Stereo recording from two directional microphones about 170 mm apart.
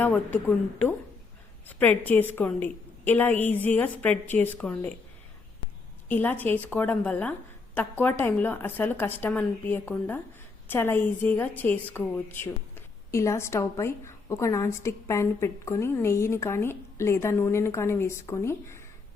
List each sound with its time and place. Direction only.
0.0 s a woman's voice: 10° left (ahead or behind)
6.1 s a woman's voice: 10° left (ahead or behind)